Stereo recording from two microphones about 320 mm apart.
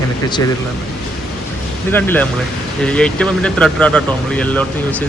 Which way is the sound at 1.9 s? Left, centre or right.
Centre.